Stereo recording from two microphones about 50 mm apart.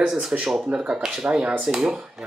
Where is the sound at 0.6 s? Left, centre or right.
Right.